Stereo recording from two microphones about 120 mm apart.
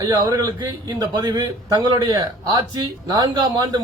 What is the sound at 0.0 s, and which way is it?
A man's voice, 30° right (ahead or behind).